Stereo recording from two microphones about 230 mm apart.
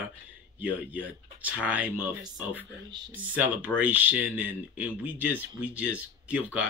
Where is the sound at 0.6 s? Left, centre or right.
Centre.